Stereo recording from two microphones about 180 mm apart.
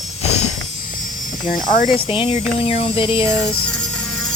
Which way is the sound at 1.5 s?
45° left (ahead or behind).